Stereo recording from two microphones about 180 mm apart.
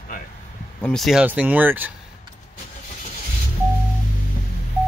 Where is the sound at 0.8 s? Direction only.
Centre (ahead or behind).